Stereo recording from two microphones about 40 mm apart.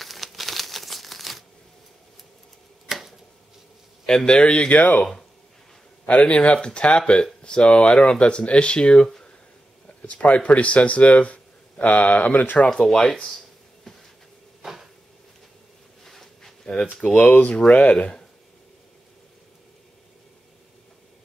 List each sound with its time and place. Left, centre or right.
0.0 s crumpling: centre
2.9 s a sound: centre
4.0 s a man's voice: centre
4.4 s speech: left
4.7 s speech: left
6.0 s speech: left
10.2 s speech: left
12.6 s speech: centre
14.6 s a sound: centre
16.0 s a sound: centre
17.0 s speech: left
17.3 s speech: left
17.6 s speech: left